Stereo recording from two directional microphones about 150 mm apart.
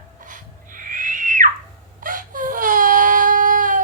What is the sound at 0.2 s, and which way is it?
Owl, 60° right (ahead or behind).